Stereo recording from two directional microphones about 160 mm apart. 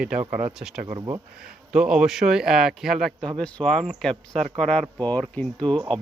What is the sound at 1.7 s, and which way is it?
Speech, 5° right (ahead or behind).